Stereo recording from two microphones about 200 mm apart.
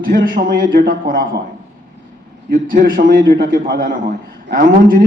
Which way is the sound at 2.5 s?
45° right (ahead or behind).